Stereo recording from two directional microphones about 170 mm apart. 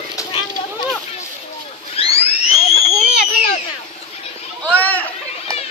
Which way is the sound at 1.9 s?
35° left (ahead or behind).